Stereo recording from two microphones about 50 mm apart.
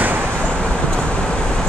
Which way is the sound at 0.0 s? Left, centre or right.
Right.